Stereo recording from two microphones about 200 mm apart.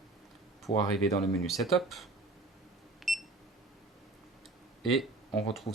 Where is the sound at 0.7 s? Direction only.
35° left (ahead or behind).